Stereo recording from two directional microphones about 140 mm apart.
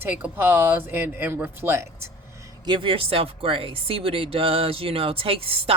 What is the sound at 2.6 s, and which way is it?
Speech, 35° right (ahead or behind).